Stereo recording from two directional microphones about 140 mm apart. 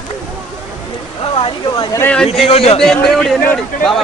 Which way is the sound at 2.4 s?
45° left (ahead or behind).